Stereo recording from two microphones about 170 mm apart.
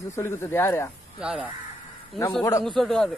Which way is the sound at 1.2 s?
5° right (ahead or behind).